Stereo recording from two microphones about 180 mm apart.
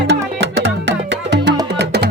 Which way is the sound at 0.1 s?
70° right (ahead or behind).